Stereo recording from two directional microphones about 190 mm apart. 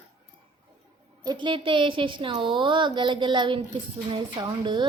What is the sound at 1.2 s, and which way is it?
A woman's voice, 25° right (ahead or behind).